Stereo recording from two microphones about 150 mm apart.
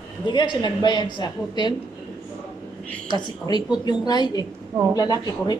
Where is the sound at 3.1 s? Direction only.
25° left (ahead or behind).